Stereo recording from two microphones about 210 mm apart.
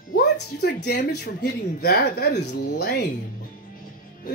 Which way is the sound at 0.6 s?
55° left (ahead or behind).